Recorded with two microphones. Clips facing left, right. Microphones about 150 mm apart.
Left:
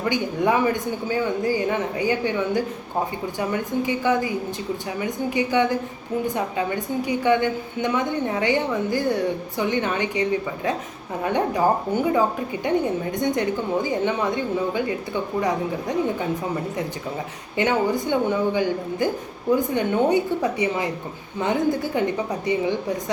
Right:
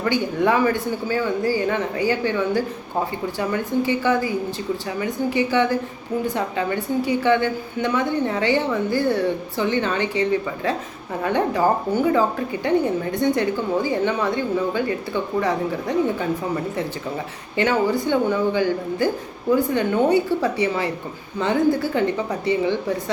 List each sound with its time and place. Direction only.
0.0 s a woman's voice: 15° left (ahead or behind)
17.6 s a woman's voice: 20° left (ahead or behind)